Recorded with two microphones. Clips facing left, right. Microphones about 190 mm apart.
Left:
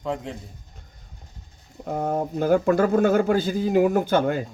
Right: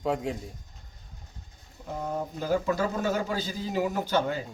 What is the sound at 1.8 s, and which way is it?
Speech, 55° left (ahead or behind).